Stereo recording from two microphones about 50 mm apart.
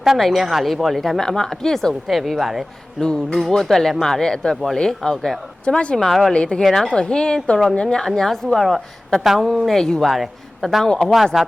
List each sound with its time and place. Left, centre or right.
0.2 s speech: centre
3.0 s speech: centre
5.6 s speech: left
6.0 s speech: centre
6.3 s speech: left
6.6 s a woman's voice: centre
9.6 s speech: centre
10.8 s speech: centre
11.3 s speech: centre